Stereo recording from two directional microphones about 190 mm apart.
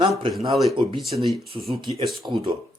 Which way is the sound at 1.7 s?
25° right (ahead or behind).